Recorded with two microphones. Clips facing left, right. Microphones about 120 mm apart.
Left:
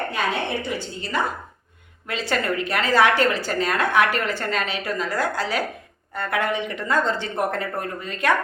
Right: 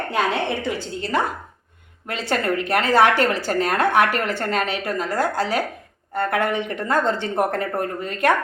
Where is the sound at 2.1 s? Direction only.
50° right (ahead or behind).